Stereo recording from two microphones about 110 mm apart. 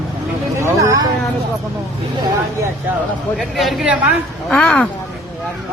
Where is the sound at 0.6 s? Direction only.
25° right (ahead or behind).